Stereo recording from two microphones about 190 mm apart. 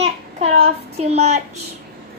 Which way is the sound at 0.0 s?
35° right (ahead or behind).